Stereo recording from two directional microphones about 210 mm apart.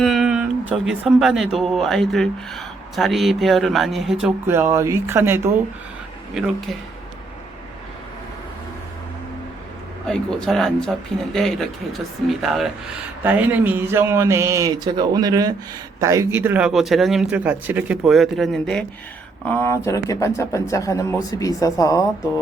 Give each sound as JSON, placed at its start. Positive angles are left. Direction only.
{"t": 0.0, "sound": "a sound", "side_deg": 0}
{"t": 1.5, "sound": "speech", "side_deg": 0}
{"t": 10.1, "sound": "a man's voice", "side_deg": 0}